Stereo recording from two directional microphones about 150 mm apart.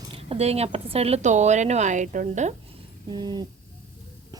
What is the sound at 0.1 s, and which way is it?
A woman's voice, 40° right (ahead or behind).